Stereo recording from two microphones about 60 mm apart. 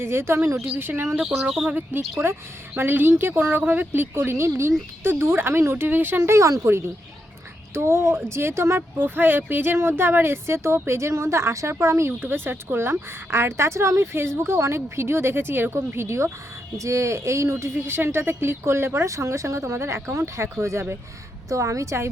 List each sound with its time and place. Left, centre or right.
0.0 s a woman's voice: right
1.2 s speech: centre
1.9 s speech: right
6.3 s a woman's voice: right
7.7 s a woman's voice: right
9.0 s a woman's voice: right